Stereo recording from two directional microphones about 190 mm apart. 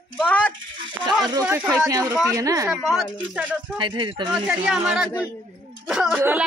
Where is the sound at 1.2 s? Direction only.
20° right (ahead or behind).